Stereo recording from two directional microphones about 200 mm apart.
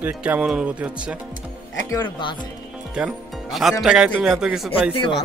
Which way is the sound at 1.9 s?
20° left (ahead or behind).